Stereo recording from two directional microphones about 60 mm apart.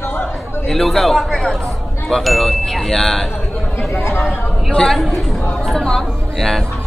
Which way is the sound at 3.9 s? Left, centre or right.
Left.